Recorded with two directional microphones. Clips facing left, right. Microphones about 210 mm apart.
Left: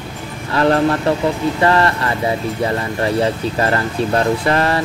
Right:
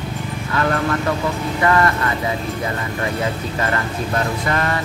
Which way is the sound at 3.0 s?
35° left (ahead or behind).